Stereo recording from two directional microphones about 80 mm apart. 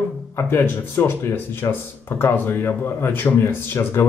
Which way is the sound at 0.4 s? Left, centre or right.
Left.